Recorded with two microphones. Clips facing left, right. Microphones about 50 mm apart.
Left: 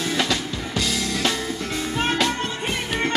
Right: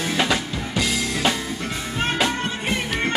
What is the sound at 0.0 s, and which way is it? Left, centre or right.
Drum kit, right.